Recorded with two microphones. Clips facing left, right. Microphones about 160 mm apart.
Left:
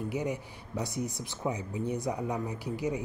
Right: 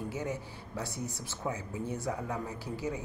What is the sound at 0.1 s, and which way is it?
Speech, 15° left (ahead or behind).